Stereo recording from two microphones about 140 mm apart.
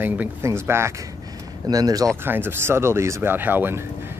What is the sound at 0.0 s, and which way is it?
Speech, 15° right (ahead or behind).